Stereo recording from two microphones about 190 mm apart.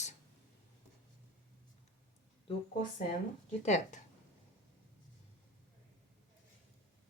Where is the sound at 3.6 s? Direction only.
40° left (ahead or behind).